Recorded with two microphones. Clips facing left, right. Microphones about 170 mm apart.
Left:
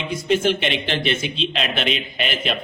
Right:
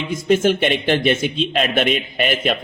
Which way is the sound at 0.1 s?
45° right (ahead or behind).